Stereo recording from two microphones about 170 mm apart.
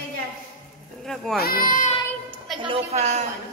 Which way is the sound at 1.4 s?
55° left (ahead or behind).